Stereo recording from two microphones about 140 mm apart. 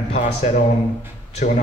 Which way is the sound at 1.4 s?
70° left (ahead or behind).